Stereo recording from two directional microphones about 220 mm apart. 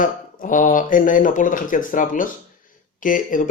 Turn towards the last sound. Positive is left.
turn(degrees=40)  # may be behind; listen again after turning